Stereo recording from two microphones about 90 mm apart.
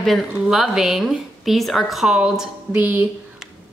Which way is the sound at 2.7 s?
20° right (ahead or behind).